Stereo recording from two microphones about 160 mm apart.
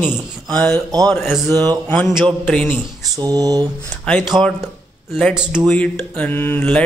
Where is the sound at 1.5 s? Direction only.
25° right (ahead or behind).